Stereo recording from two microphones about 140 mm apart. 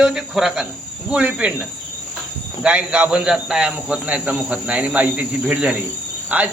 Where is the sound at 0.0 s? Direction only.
5° right (ahead or behind).